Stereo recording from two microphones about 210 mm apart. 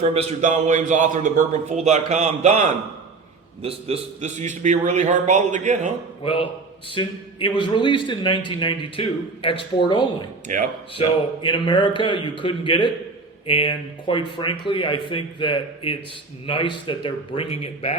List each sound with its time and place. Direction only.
0.0 s a man's voice: 30° right (ahead or behind)
6.2 s a man's voice: 25° left (ahead or behind)
10.5 s a man's voice: 40° right (ahead or behind)
10.9 s a man's voice: 25° left (ahead or behind)